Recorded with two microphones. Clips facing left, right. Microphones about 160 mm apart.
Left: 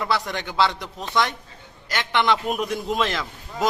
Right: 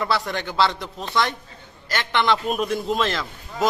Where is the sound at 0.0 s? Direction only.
15° left (ahead or behind).